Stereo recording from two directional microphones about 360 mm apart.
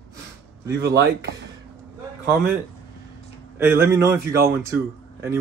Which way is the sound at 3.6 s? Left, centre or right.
Centre.